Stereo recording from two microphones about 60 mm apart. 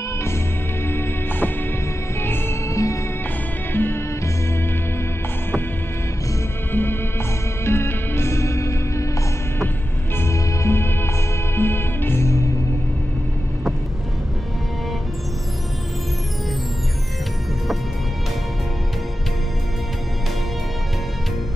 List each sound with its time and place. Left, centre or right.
0.8 s music: left
2.7 s music: left
3.7 s music: left
6.7 s music: left
10.1 s music: left